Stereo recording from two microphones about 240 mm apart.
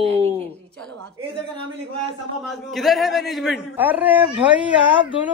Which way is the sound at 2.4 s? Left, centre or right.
Centre.